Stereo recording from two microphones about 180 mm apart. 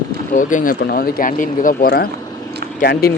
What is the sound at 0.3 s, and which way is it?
Speech, 50° left (ahead or behind).